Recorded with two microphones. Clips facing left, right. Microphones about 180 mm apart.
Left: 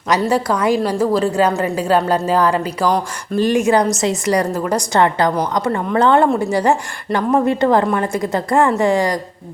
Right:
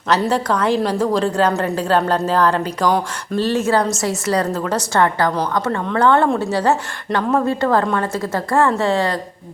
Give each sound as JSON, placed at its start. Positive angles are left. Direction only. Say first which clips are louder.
{"t": 0.2, "sound": "a woman's voice", "louder": "left 1 dB", "side_deg": 10}